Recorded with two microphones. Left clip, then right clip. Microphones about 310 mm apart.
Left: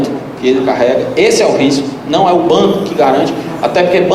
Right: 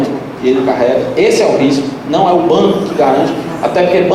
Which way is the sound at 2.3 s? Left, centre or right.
Right.